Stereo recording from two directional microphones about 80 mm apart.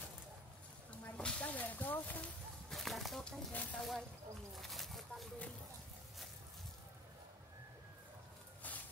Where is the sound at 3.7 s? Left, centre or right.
Centre.